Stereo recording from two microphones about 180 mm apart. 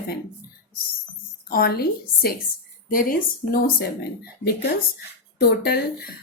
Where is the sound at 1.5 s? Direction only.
60° left (ahead or behind).